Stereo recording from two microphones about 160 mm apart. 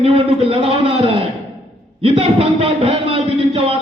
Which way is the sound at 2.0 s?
35° right (ahead or behind).